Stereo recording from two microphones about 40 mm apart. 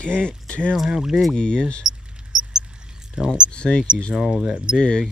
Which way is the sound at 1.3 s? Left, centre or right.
Centre.